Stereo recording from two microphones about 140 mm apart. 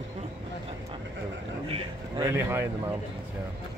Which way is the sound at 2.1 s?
20° right (ahead or behind).